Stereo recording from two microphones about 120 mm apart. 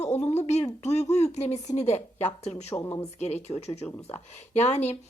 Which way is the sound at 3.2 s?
65° left (ahead or behind).